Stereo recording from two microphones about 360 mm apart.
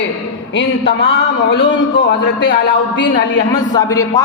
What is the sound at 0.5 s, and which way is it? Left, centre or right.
Speech, left.